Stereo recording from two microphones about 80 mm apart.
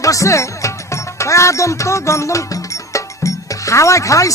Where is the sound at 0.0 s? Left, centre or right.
Left.